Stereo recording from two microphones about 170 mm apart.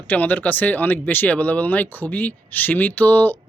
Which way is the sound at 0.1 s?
10° left (ahead or behind).